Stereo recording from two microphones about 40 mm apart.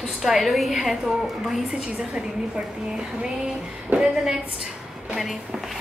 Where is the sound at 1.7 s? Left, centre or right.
Right.